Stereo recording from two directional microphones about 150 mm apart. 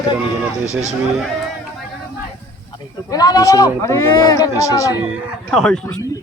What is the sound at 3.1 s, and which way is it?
Speech, 25° left (ahead or behind).